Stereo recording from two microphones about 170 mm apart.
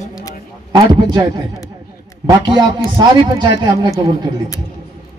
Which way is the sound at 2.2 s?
25° right (ahead or behind).